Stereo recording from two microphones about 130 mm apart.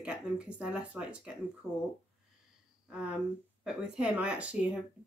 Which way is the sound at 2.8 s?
5° right (ahead or behind).